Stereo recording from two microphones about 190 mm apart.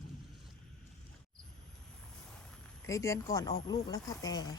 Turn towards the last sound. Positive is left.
turn(degrees=20)  # may be behind; listen again after turning